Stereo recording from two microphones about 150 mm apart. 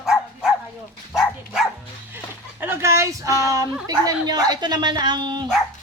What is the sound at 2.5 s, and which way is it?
Speech, 15° right (ahead or behind).